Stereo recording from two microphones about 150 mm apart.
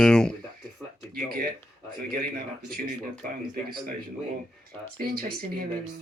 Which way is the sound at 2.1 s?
80° right.